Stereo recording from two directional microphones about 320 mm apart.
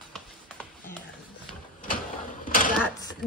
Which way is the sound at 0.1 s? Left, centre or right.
Centre.